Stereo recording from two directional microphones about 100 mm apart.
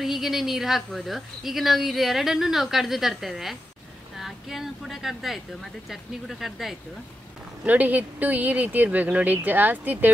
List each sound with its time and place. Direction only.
0.0 s speech: 5° right (ahead or behind)
7.6 s speech: 15° right (ahead or behind)